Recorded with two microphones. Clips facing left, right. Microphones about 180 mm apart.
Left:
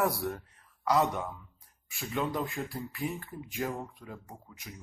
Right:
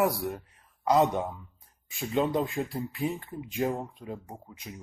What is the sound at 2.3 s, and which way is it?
Speech, 20° right (ahead or behind).